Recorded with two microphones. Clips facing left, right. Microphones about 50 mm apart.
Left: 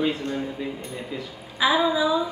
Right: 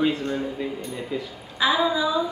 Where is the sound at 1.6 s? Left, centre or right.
Centre.